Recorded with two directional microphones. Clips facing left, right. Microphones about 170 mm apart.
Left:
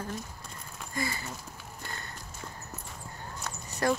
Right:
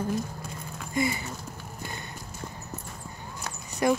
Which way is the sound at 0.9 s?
20° right (ahead or behind).